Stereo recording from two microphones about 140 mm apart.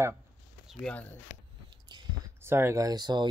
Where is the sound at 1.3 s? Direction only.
50° left (ahead or behind).